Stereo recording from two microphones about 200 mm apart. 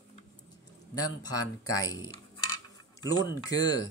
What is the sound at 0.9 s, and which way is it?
Speech, 20° left (ahead or behind).